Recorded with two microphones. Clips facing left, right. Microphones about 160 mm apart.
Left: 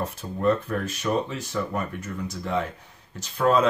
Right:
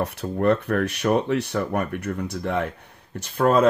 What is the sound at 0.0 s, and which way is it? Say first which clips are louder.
Speech: right 3 dB; 70° right (ahead or behind).